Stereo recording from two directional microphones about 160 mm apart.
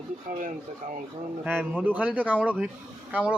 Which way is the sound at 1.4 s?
15° right (ahead or behind).